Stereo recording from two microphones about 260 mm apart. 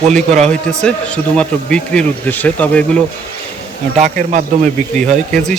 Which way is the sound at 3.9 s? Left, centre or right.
Right.